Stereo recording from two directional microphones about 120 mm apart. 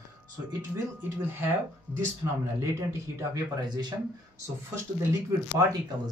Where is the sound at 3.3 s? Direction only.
35° right (ahead or behind).